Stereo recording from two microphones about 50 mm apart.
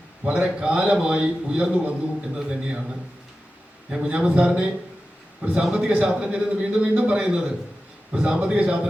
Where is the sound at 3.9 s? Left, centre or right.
Right.